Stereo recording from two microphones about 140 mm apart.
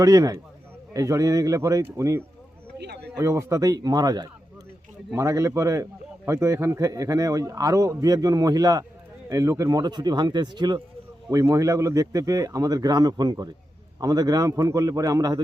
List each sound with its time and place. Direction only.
0.0 s a man's voice: 25° right (ahead or behind)